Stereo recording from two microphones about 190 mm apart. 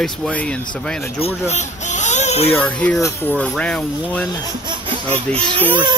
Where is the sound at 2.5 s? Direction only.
10° left (ahead or behind).